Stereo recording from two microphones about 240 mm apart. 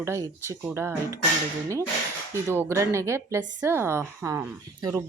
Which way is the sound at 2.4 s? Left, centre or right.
Centre.